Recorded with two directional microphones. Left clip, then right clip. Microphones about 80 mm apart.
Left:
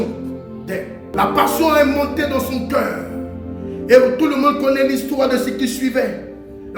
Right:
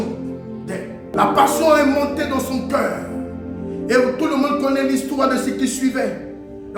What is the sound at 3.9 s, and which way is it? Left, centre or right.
A man's voice, right.